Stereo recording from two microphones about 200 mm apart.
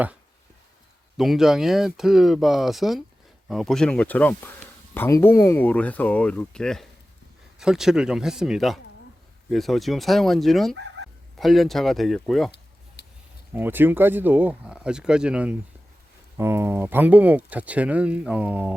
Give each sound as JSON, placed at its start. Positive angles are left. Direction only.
{"t": 1.1, "sound": "speech", "side_deg": 0}
{"t": 13.0, "sound": "a sound", "side_deg": 55}
{"t": 13.5, "sound": "speech", "side_deg": -10}